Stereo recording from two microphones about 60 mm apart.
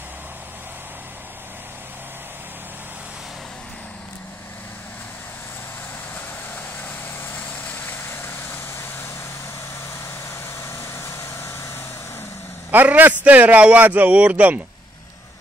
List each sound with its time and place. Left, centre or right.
7.3 s vehicle: left
8.0 s vehicle: left
10.6 s vehicle: left
12.7 s a man's voice: right